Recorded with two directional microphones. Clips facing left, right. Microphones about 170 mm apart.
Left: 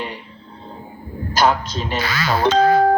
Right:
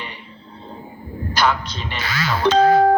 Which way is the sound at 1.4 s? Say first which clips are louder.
Left 3 dB; 40° left (ahead or behind).